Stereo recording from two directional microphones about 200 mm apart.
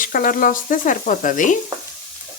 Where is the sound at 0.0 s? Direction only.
45° left (ahead or behind).